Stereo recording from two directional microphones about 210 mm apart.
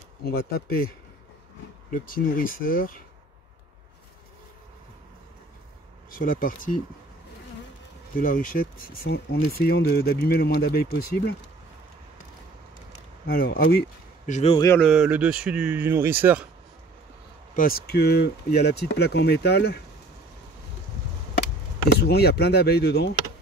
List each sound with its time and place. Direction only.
0.2 s speech: 45° left (ahead or behind)
6.0 s speech: 40° left (ahead or behind)
8.2 s speech: 40° left (ahead or behind)
13.3 s speech: 45° left (ahead or behind)
14.8 s speech: centre (ahead or behind)
17.6 s speech: 45° left (ahead or behind)
22.0 s speech: 50° left (ahead or behind)